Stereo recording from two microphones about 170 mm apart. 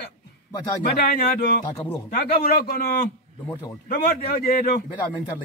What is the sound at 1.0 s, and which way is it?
Speech, 65° left (ahead or behind).